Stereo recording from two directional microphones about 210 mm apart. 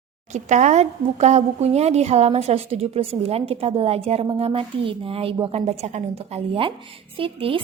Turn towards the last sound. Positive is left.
turn(degrees=-25)  # may be behind; listen again after turning